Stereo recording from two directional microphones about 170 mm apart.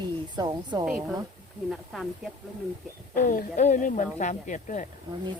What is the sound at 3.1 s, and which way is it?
Speech, 55° left (ahead or behind).